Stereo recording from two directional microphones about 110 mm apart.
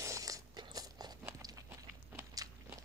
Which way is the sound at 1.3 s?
35° right (ahead or behind).